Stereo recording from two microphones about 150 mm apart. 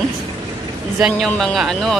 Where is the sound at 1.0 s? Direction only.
Centre (ahead or behind).